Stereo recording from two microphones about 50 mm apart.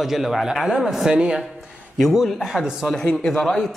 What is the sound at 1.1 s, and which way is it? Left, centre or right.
Speech, centre.